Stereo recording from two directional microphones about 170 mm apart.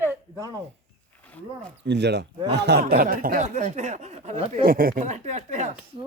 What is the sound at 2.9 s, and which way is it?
Speech, 60° right (ahead or behind).